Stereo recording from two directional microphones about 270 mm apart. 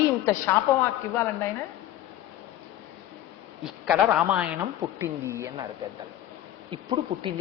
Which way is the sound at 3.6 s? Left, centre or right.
Centre.